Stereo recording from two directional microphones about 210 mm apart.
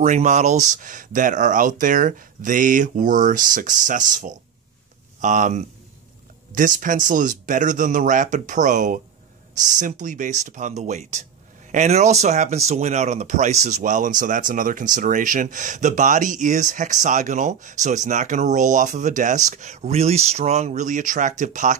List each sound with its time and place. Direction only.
0.0 s speech: 35° right (ahead or behind)